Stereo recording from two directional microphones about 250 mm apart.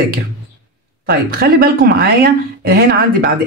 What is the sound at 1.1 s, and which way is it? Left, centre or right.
Speech, right.